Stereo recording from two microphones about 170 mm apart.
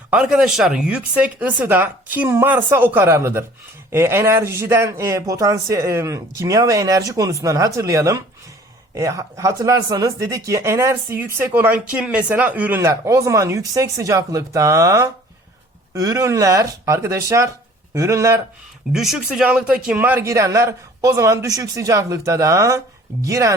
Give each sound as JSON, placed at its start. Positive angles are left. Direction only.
{"t": 0.1, "sound": "speech", "side_deg": -5}
{"t": 18.9, "sound": "speech", "side_deg": 0}